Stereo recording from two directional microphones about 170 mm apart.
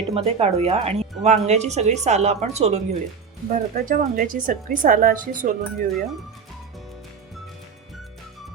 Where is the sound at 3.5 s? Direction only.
55° right (ahead or behind).